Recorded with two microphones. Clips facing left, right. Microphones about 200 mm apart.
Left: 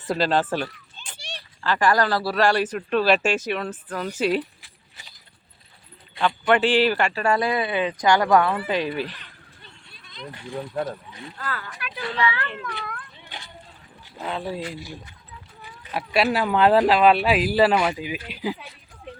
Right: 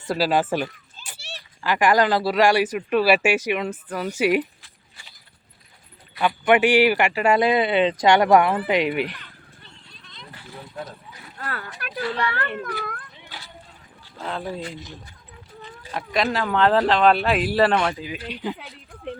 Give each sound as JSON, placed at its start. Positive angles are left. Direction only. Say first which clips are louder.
{"t": 0.1, "sound": "speech", "louder": "right 1 dB", "side_deg": -10}
{"t": 6.4, "sound": "speech", "louder": "right 3 dB", "side_deg": -10}
{"t": 11.8, "sound": "a child's voice", "louder": "even", "side_deg": -45}
{"t": 14.3, "sound": "speech", "louder": "left 1 dB", "side_deg": 5}
{"t": 15.9, "sound": "speech", "louder": "left 2 dB", "side_deg": 10}
{"t": 18.5, "sound": "a sound", "louder": "right 2 dB", "side_deg": -55}